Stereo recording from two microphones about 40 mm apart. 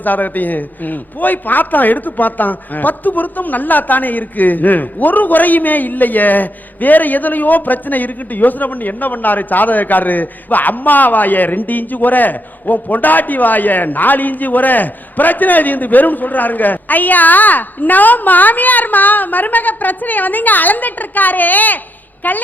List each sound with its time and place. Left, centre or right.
0.0 s a man's voice: left